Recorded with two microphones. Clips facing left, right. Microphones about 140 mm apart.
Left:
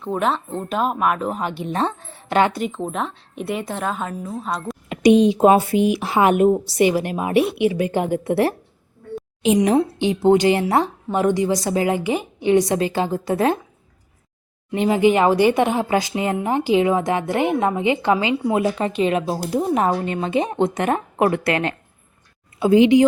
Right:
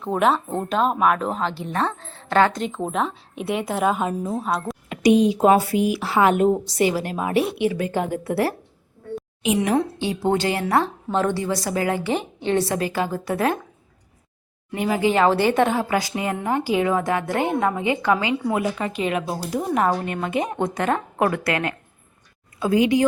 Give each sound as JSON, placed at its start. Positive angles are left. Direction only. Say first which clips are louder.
{"t": 0.0, "sound": "a woman's voice", "louder": "right 2 dB", "side_deg": 0}
{"t": 1.4, "sound": "a woman's voice", "louder": "left 1 dB", "side_deg": 15}
{"t": 4.9, "sound": "speech", "louder": "left 3 dB", "side_deg": 25}
{"t": 9.7, "sound": "speech", "louder": "left 4 dB", "side_deg": 20}
{"t": 14.7, "sound": "speech", "louder": "left 4 dB", "side_deg": 25}